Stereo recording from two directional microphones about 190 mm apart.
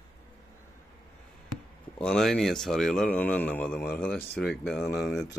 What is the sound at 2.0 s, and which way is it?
Speech, 5° left (ahead or behind).